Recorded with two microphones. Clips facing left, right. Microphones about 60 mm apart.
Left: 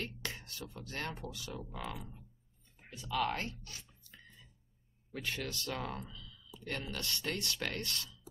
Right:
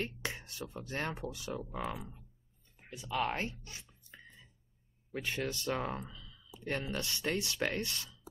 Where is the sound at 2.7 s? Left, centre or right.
Right.